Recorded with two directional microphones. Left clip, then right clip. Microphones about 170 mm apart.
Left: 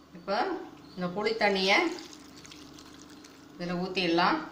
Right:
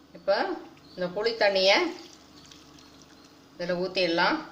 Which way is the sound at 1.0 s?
55° right (ahead or behind).